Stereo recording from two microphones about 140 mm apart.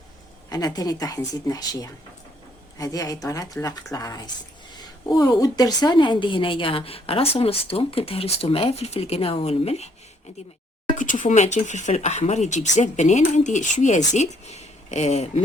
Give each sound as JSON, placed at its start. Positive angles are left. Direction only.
{"t": 0.5, "sound": "a woman's voice", "side_deg": 25}
{"t": 10.9, "sound": "speech", "side_deg": 65}